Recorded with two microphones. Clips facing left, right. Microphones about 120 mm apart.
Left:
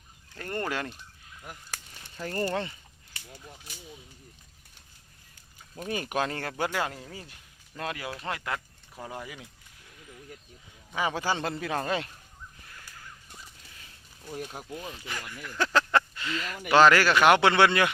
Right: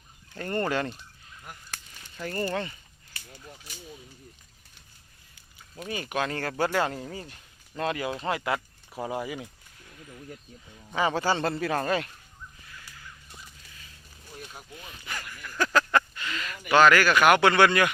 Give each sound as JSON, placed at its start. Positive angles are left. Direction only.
{"t": 0.3, "sound": "fowl", "side_deg": 5}
{"t": 2.2, "sound": "speech", "side_deg": 30}
{"t": 3.2, "sound": "speech", "side_deg": 10}
{"t": 5.8, "sound": "speech", "side_deg": 45}
{"t": 6.2, "sound": "speech", "side_deg": 25}
{"t": 6.5, "sound": "speech", "side_deg": 10}
{"t": 7.0, "sound": "fowl", "side_deg": 5}
{"t": 8.2, "sound": "speech", "side_deg": -5}
{"t": 10.9, "sound": "speech", "side_deg": 10}
{"t": 14.5, "sound": "speech", "side_deg": 35}
{"t": 15.0, "sound": "speech", "side_deg": 20}